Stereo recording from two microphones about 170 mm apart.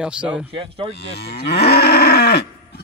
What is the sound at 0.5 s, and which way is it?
Speech, 30° right (ahead or behind).